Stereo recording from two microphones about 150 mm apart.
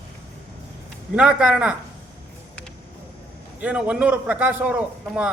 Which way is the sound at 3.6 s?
10° right (ahead or behind).